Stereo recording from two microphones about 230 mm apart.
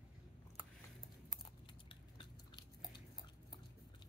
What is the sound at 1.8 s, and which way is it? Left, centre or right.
Chewing, left.